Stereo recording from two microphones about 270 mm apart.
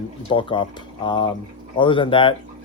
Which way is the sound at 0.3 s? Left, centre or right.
Centre.